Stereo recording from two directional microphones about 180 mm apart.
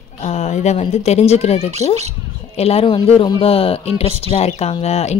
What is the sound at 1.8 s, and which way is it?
Speech, 20° left (ahead or behind).